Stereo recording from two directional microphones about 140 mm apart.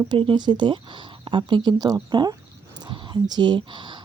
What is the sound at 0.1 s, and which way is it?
Speech, 35° right (ahead or behind).